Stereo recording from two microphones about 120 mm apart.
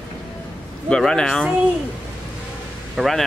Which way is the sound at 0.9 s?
5° left (ahead or behind).